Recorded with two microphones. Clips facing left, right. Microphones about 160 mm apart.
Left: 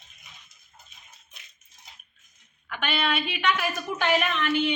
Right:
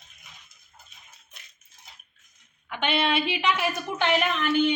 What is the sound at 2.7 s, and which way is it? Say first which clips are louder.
A woman's voice: right 3 dB; 25° right (ahead or behind).